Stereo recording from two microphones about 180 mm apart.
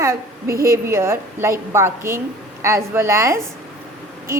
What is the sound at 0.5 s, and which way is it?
Speech, 55° right (ahead or behind).